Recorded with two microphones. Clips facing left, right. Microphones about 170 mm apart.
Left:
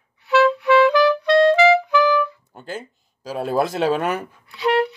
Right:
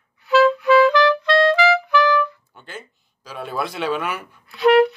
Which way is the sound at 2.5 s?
40° left (ahead or behind).